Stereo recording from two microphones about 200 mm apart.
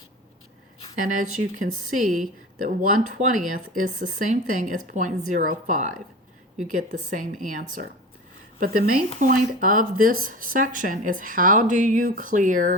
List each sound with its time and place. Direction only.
0.9 s speech: 40° right (ahead or behind)